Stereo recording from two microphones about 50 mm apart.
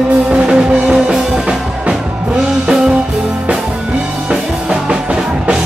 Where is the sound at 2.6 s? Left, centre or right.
Centre.